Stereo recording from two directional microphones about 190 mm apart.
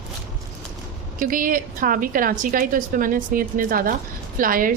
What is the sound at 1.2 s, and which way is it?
A woman's voice, 45° right (ahead or behind).